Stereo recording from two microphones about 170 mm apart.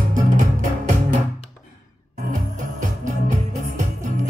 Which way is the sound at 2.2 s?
45° right (ahead or behind).